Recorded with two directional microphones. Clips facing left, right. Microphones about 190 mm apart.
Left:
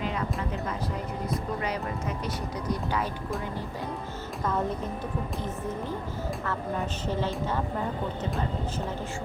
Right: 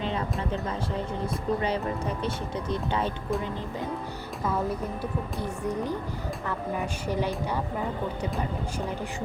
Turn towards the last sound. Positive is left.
turn(degrees=-15)  # may be behind; listen again after turning